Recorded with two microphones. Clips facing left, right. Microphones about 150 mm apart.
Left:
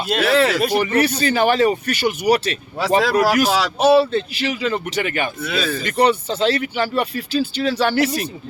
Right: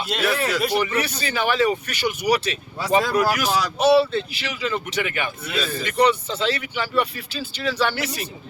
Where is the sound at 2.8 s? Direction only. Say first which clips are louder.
Left 3 dB; 90° left.